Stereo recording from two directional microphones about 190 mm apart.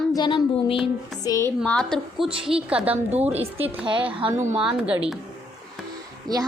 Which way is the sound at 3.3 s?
30° right (ahead or behind).